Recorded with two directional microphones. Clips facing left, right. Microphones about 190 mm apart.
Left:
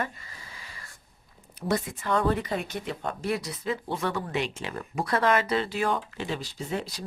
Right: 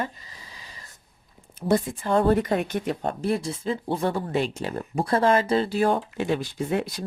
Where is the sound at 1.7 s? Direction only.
30° right (ahead or behind).